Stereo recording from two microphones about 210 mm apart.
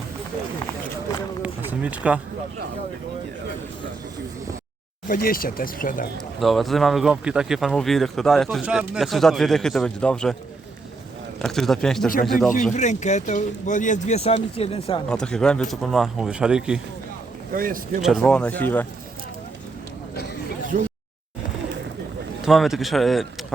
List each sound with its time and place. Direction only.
1.4 s speech: 5° right (ahead or behind)
5.0 s speech: 45° left (ahead or behind)
6.4 s speech: centre (ahead or behind)
11.3 s speech: centre (ahead or behind)
12.7 s speech: 35° left (ahead or behind)
15.1 s speech: 5° left (ahead or behind)
17.5 s speech: 40° right (ahead or behind)
18.0 s speech: centre (ahead or behind)
22.4 s speech: centre (ahead or behind)